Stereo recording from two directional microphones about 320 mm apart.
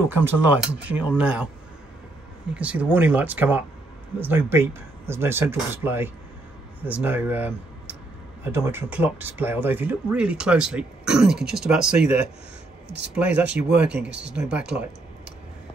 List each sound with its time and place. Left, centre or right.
0.1 s speech: centre
2.5 s speech: centre
12.8 s speech: right
13.1 s speech: centre
13.9 s speech: right
14.3 s speech: centre